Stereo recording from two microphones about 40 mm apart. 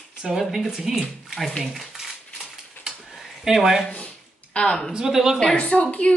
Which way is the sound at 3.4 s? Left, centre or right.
Centre.